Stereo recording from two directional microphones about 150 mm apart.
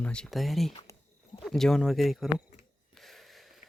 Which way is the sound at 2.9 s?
Centre (ahead or behind).